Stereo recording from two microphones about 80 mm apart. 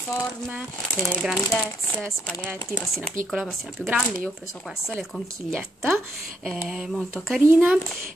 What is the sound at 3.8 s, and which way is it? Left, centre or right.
Speech, centre.